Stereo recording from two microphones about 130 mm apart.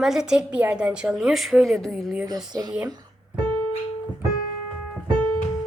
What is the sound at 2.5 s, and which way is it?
Speech, 30° right (ahead or behind).